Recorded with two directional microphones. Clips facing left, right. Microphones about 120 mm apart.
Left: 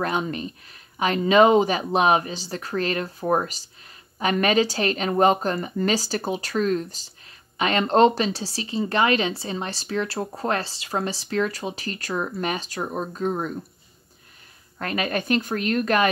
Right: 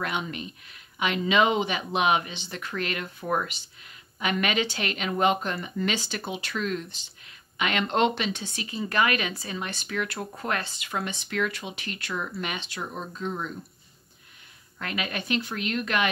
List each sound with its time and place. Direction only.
0.0 s speech: 40° left (ahead or behind)
14.8 s speech: 40° left (ahead or behind)